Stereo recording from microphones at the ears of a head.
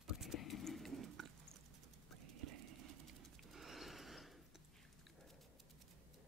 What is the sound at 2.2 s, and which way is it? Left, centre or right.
Horse, right.